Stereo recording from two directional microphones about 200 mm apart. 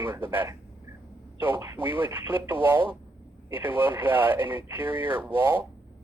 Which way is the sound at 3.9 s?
10° right (ahead or behind).